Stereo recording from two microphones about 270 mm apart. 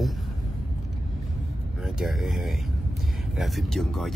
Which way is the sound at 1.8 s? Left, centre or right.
Centre.